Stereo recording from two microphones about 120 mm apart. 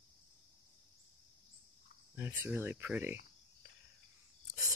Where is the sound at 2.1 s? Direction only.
20° right (ahead or behind).